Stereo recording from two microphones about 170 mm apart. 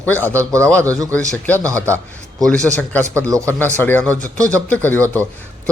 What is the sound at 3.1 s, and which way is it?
Speech, 15° right (ahead or behind).